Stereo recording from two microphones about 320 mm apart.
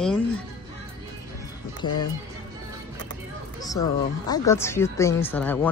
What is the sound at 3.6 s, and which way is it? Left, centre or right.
A woman's voice, centre.